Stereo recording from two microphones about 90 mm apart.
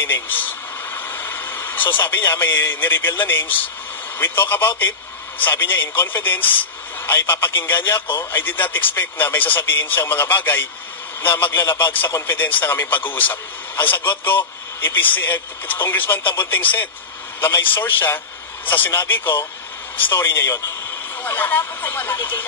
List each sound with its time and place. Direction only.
0.0 s speech: 20° left (ahead or behind)